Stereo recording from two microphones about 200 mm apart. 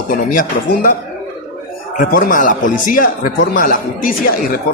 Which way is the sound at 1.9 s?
45° left (ahead or behind).